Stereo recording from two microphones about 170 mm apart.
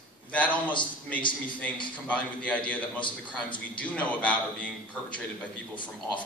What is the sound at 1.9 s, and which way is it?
A man's voice, 5° left (ahead or behind).